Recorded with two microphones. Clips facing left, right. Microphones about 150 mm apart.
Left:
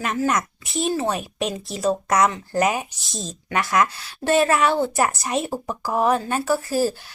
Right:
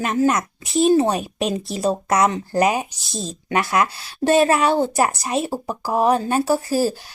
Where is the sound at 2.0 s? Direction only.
30° right (ahead or behind).